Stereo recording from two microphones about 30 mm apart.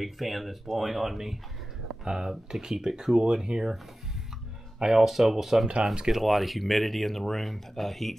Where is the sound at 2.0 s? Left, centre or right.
Right.